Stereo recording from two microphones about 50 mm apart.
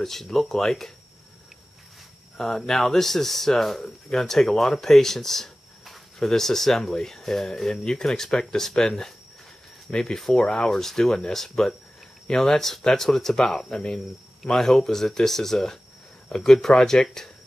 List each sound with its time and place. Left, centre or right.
0.0 s speech: centre
2.3 s speech: centre